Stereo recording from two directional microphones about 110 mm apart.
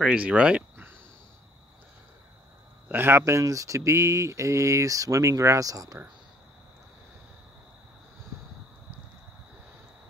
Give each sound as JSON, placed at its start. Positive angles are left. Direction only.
{"t": 0.0, "sound": "speech", "side_deg": -10}
{"t": 2.9, "sound": "speech", "side_deg": -20}